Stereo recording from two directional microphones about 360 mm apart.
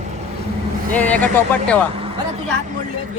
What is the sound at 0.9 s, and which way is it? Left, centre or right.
Speech, centre.